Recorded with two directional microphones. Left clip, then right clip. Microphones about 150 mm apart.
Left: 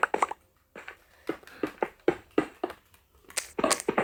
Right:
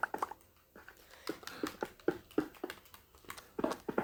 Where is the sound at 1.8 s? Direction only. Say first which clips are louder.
Left 11 dB; 25° left (ahead or behind).